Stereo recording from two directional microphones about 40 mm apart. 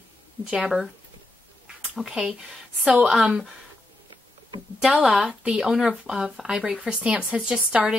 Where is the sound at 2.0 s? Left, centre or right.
Centre.